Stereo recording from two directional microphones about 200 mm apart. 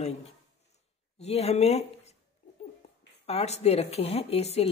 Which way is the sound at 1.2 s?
30° left (ahead or behind).